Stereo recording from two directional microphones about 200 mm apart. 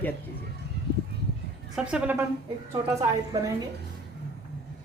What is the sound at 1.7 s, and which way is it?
A woman's voice, 5° right (ahead or behind).